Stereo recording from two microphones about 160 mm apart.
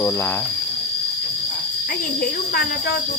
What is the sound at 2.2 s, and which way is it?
Cricket, 65° left (ahead or behind).